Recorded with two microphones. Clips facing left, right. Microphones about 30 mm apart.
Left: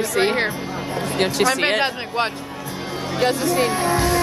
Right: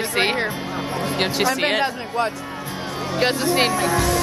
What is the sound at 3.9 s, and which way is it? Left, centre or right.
Speech, left.